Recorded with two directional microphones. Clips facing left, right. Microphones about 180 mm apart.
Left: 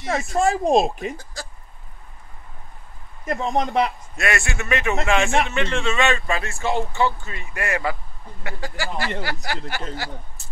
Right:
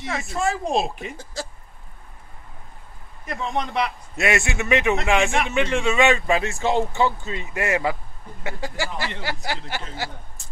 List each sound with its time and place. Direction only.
0.3 s speech: 40° left (ahead or behind)
1.1 s speech: 25° right (ahead or behind)
3.3 s speech: 45° left (ahead or behind)
4.2 s a man's voice: 20° right (ahead or behind)